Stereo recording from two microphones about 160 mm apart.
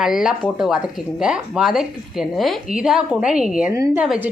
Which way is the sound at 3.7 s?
20° right (ahead or behind).